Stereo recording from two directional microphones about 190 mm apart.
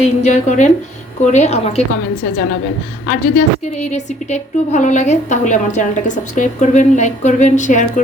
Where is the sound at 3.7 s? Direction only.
35° left (ahead or behind).